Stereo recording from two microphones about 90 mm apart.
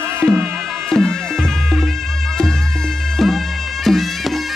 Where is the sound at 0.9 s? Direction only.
5° left (ahead or behind).